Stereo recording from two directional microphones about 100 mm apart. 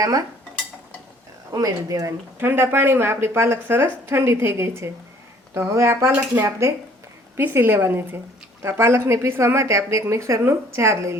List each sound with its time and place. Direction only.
1.5 s speech: 35° right (ahead or behind)
2.4 s a woman's voice: 25° right (ahead or behind)